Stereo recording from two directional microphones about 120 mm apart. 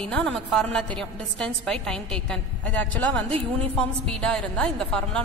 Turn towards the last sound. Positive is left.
turn(degrees=5)  # may be behind; listen again after turning